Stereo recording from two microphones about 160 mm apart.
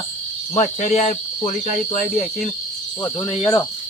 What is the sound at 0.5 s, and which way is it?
Speech, 45° left (ahead or behind).